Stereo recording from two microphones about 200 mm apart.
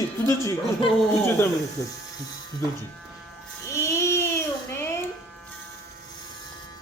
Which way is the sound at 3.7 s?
15° left (ahead or behind).